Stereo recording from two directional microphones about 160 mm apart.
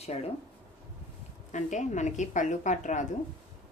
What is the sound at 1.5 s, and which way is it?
A woman's voice, 50° left (ahead or behind).